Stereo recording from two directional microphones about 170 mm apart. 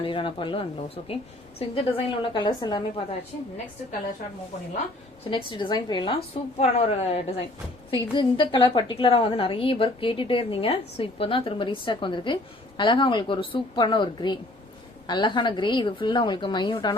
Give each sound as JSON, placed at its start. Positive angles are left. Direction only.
{"t": 0.0, "sound": "a woman's voice", "side_deg": 30}
{"t": 5.5, "sound": "a woman's voice", "side_deg": 25}
{"t": 6.3, "sound": "a woman's voice", "side_deg": 35}